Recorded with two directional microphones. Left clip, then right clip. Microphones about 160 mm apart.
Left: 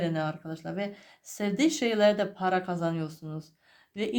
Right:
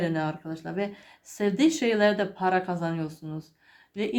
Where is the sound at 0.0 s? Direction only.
35° left (ahead or behind).